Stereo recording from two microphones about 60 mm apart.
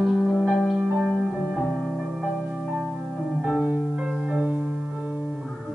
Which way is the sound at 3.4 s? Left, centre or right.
Centre.